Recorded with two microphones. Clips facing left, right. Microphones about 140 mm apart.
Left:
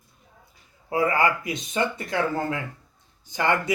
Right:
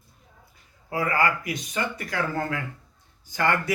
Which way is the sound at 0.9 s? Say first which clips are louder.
Left 2 dB; 25° left (ahead or behind).